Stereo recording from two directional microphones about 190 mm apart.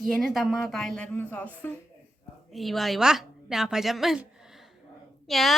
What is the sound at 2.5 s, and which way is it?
A woman's voice, centre (ahead or behind).